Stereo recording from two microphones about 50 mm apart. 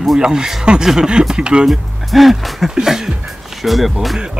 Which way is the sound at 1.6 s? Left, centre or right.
Centre.